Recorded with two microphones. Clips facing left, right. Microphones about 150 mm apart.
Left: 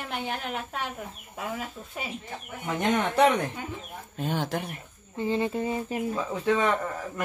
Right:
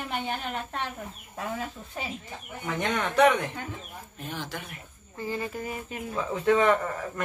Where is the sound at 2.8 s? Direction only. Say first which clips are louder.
Even; 30° left (ahead or behind).